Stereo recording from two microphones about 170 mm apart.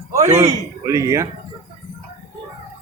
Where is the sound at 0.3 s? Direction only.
20° right (ahead or behind).